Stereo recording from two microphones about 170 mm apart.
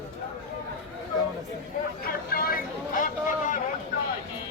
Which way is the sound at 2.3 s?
60° left (ahead or behind).